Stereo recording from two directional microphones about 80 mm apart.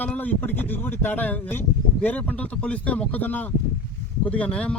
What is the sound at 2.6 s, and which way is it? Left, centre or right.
Speech, centre.